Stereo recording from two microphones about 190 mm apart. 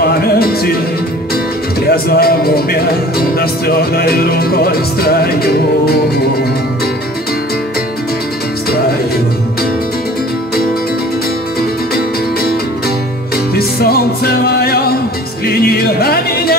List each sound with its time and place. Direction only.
0.0 s music: 55° left (ahead or behind)
1.9 s speech: 55° left (ahead or behind)
13.6 s music: 55° left (ahead or behind)